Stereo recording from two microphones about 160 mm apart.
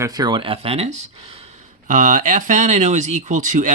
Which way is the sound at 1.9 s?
50° right (ahead or behind).